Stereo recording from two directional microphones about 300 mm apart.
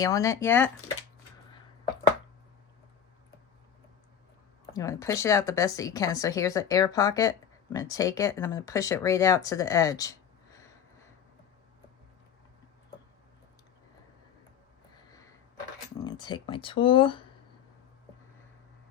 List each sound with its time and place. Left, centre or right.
0.0 s speech: centre
4.7 s speech: centre
16.0 s speech: centre